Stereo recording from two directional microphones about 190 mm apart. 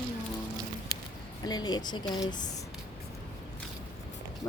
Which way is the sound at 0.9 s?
20° left (ahead or behind).